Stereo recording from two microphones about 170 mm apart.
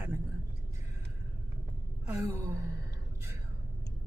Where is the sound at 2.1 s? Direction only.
15° right (ahead or behind).